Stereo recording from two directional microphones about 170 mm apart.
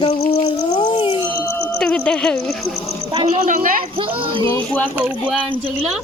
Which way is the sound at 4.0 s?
30° right (ahead or behind).